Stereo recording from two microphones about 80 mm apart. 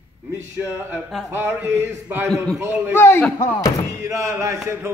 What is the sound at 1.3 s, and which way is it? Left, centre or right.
Clapping, right.